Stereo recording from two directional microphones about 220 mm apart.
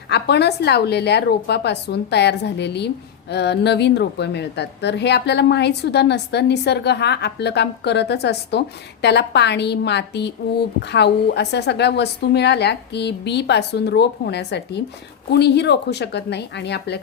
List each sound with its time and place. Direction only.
0.1 s a woman's voice: 50° left (ahead or behind)